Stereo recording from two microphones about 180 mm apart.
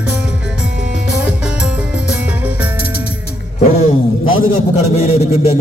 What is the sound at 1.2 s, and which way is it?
Music, 5° right (ahead or behind).